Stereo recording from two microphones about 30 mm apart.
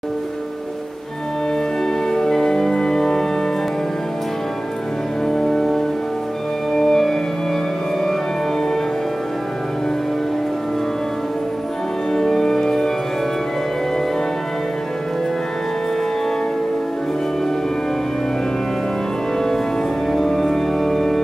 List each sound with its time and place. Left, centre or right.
2.0 s music: centre
5.2 s music: centre
12.1 s music: centre
20.1 s organ: centre